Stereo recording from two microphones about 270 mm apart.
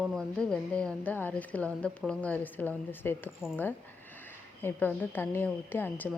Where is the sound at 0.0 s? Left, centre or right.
Centre.